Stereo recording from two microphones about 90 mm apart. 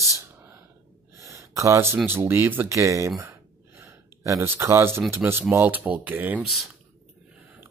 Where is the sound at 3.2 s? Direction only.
30° right (ahead or behind).